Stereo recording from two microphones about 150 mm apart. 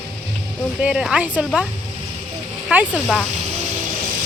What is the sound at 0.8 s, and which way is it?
Speech, 5° right (ahead or behind).